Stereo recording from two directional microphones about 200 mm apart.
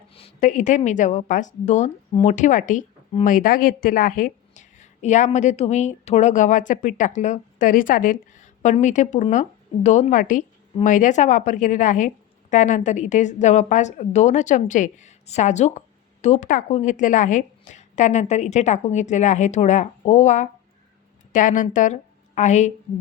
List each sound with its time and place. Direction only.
0.1 s a woman's voice: 30° left (ahead or behind)